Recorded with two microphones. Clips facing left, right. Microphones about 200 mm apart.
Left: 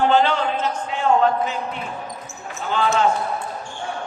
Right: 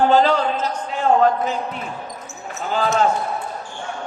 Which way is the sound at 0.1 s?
40° right (ahead or behind).